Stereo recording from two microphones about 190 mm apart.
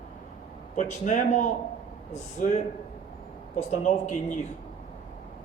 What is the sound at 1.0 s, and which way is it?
A man's voice, 40° left (ahead or behind).